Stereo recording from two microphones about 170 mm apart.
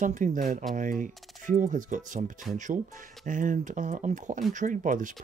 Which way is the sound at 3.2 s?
50° right (ahead or behind).